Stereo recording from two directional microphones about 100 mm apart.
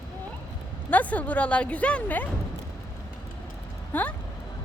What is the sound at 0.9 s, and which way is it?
Speech, 15° left (ahead or behind).